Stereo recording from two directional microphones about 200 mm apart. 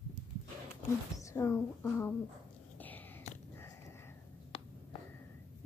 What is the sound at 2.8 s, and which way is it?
Wheeze, 10° left (ahead or behind).